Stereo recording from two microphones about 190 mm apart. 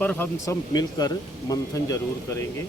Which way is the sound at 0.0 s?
10° left (ahead or behind).